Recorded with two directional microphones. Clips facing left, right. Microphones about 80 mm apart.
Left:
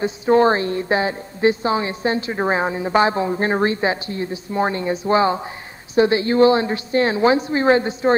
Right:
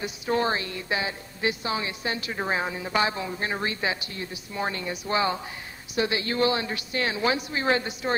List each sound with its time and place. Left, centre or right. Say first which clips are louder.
0.0 s a woman's voice: left 11 dB; left